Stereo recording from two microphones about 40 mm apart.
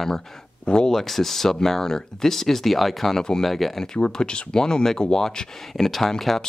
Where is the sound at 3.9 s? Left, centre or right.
Left.